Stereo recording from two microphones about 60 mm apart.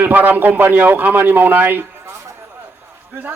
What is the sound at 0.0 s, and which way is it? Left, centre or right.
A man's voice, right.